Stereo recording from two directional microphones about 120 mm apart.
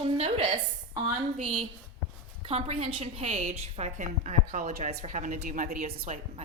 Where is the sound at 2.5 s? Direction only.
50° right (ahead or behind).